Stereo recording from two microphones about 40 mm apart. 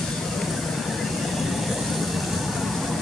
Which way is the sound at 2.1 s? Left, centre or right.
Centre.